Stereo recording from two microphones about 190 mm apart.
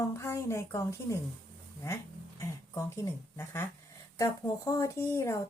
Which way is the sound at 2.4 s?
15° left (ahead or behind).